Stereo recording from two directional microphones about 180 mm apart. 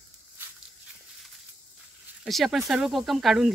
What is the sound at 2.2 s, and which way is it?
Speech, centre (ahead or behind).